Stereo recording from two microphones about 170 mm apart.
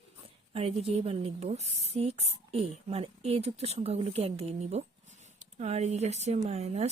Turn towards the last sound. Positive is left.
turn(degrees=-40)  # may be behind; listen again after turning